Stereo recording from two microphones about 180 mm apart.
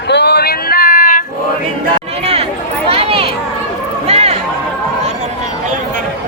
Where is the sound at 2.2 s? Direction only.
35° right (ahead or behind).